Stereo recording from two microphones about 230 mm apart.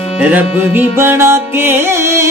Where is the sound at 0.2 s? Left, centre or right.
Centre.